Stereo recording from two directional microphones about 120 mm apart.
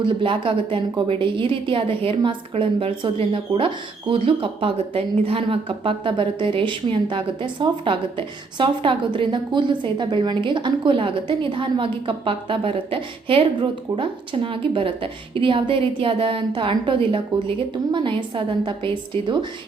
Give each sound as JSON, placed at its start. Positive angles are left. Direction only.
{"t": 0.2, "sound": "a woman's voice", "side_deg": -45}